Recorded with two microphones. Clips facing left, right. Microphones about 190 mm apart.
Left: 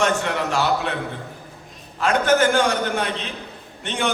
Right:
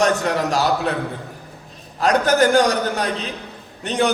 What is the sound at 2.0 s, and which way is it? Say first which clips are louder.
A man's voice: right 2 dB; 40° right (ahead or behind).